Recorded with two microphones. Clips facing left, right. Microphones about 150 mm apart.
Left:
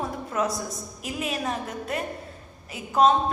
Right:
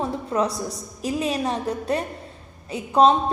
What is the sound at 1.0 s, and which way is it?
A woman's voice, 30° right (ahead or behind).